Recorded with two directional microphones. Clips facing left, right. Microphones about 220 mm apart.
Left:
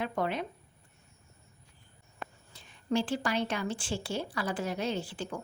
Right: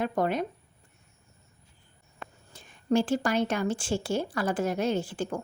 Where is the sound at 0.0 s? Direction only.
45° right (ahead or behind).